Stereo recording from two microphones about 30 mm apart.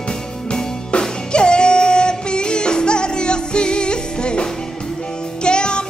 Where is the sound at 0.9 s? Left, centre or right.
Left.